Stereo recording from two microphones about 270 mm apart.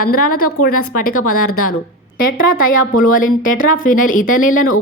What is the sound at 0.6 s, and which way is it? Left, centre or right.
Speech, left.